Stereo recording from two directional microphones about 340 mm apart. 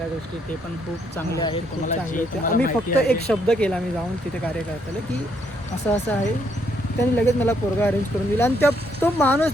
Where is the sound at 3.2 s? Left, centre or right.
Centre.